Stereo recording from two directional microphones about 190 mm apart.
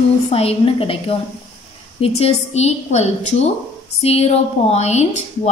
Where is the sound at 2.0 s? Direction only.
35° left (ahead or behind).